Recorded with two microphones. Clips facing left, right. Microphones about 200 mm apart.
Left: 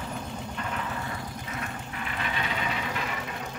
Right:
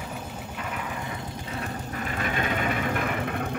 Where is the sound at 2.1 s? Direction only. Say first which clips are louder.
Right 4 dB; 45° right (ahead or behind).